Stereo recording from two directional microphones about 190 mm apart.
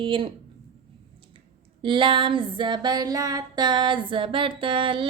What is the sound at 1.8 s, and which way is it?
A woman's voice, 25° right (ahead or behind).